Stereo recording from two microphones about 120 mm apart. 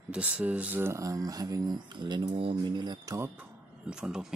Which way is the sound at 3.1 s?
20° right (ahead or behind).